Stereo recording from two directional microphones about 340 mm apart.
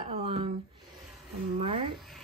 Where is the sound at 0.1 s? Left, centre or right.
Centre.